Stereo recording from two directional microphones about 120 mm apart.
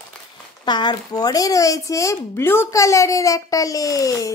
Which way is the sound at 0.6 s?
40° left (ahead or behind).